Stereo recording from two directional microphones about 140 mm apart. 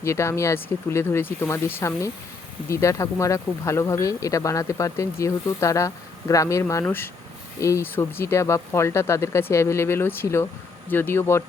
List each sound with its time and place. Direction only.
0.0 s speech: 20° left (ahead or behind)